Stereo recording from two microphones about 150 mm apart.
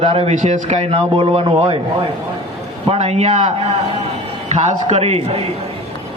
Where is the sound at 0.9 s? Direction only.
35° right (ahead or behind).